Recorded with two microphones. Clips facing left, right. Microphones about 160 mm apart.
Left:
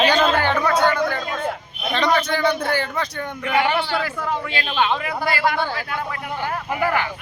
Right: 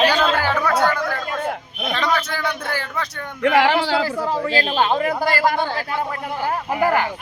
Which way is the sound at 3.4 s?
90° right.